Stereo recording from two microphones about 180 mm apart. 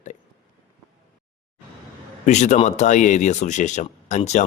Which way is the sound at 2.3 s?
40° left (ahead or behind).